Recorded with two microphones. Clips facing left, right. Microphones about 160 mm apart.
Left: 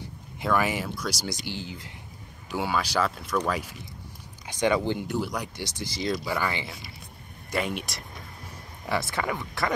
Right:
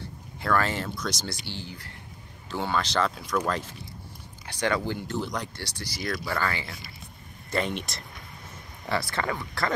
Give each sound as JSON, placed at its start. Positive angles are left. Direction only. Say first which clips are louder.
{"t": 0.4, "sound": "speech", "louder": "left 1 dB", "side_deg": 15}